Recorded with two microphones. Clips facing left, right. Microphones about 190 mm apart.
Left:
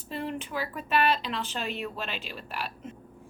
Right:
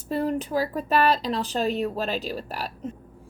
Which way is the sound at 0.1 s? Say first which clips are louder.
Right 8 dB; 40° right (ahead or behind).